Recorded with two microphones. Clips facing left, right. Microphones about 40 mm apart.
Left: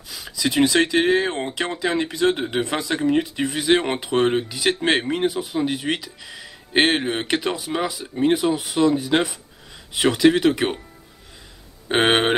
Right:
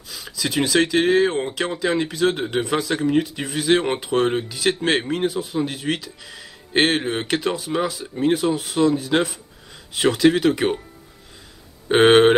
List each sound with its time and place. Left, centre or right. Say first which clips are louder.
0.1 s speech: left 2 dB; centre
11.9 s speech: right 5 dB; centre